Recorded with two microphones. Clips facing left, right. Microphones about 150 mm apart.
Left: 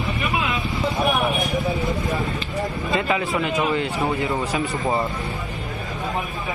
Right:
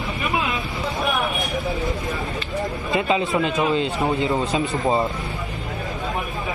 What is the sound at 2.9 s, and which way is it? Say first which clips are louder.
A man's voice: right 2 dB; 20° right (ahead or behind).